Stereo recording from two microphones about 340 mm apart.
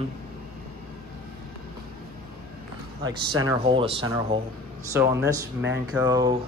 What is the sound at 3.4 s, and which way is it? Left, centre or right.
Speech, centre.